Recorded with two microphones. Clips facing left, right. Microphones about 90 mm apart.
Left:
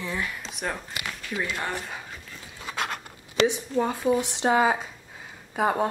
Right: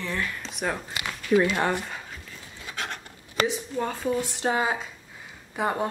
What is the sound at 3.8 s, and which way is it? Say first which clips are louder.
Speech: left 4 dB; 15° left (ahead or behind).